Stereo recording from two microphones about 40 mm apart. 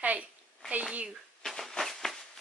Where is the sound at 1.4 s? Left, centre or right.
Centre.